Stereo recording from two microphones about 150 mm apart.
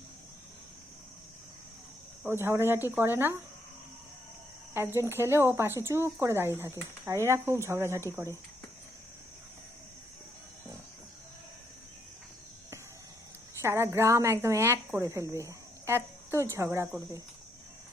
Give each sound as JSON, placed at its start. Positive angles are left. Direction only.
{"t": 2.2, "sound": "a woman's voice", "side_deg": -15}
{"t": 4.7, "sound": "a woman's voice", "side_deg": -15}
{"t": 13.6, "sound": "a woman's voice", "side_deg": -15}